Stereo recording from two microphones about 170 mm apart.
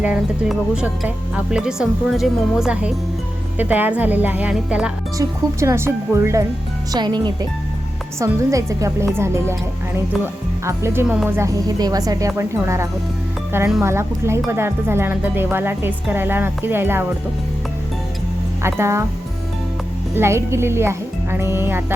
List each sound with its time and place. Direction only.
0.0 s speech: 5° right (ahead or behind)
5.1 s speech: 15° right (ahead or behind)
10.7 s speech: 15° right (ahead or behind)
18.6 s speech: 15° right (ahead or behind)
20.1 s speech: 15° right (ahead or behind)